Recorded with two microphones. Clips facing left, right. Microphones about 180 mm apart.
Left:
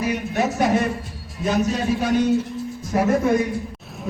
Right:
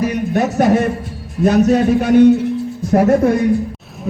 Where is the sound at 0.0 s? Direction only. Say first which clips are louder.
Right 6 dB; 45° right (ahead or behind).